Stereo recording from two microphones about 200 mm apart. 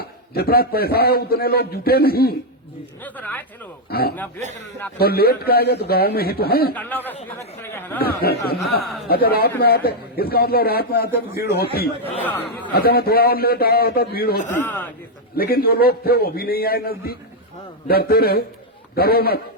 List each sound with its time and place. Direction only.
0.0 s a man's voice: 50° left (ahead or behind)
3.0 s speech: 10° left (ahead or behind)
3.8 s a man's voice: 50° left (ahead or behind)
6.7 s speech: 10° left (ahead or behind)
8.0 s a man's voice: 50° left (ahead or behind)
12.2 s speech: 10° left (ahead or behind)
12.7 s a man's voice: 50° left (ahead or behind)
14.5 s speech: 10° left (ahead or behind)
15.4 s a man's voice: 50° left (ahead or behind)